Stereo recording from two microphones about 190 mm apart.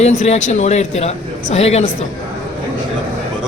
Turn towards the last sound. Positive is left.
turn(degrees=35)  # may be behind; listen again after turning